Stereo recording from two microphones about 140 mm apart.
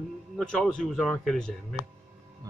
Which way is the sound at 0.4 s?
5° left (ahead or behind).